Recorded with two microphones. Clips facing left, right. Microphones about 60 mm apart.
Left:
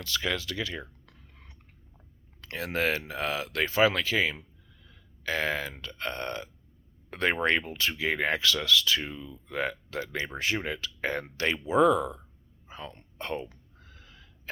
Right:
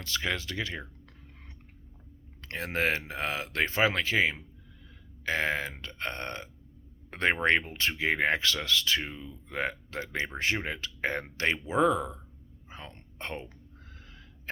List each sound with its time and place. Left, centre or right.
0.0 s speech: right
2.4 s speech: right
12.6 s whispering: right